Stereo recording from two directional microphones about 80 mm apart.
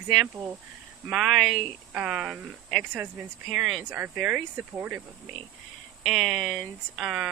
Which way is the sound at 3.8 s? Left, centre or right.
Right.